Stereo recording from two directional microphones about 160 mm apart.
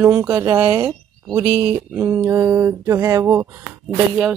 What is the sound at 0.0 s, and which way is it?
Speech, 15° right (ahead or behind).